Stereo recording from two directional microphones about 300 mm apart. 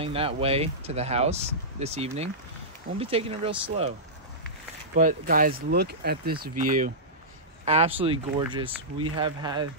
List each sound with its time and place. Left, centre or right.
0.0 s speech: centre
4.9 s speech: right